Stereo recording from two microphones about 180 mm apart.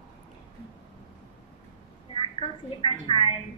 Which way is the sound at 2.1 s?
30° left (ahead or behind).